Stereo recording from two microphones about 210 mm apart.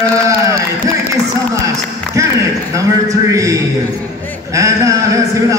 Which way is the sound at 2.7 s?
15° right (ahead or behind).